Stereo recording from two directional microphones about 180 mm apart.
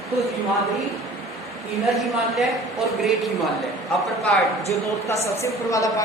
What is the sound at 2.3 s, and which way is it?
Speech, centre (ahead or behind).